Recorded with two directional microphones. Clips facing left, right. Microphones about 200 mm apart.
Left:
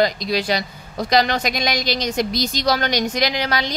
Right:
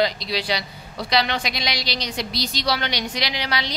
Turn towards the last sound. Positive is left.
turn(degrees=45)  # may be behind; listen again after turning